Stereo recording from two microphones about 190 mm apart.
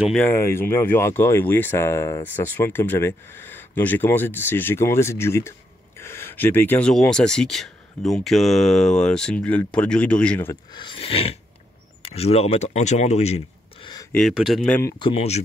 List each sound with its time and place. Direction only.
0.1 s speech: 10° left (ahead or behind)
10.5 s speech: 25° left (ahead or behind)
14.1 s speech: centre (ahead or behind)
15.0 s speech: 30° left (ahead or behind)